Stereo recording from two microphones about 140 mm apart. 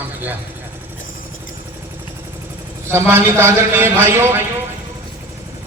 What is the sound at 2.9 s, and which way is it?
A man's voice, 15° right (ahead or behind).